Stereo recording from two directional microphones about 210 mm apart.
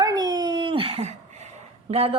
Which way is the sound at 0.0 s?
20° right (ahead or behind).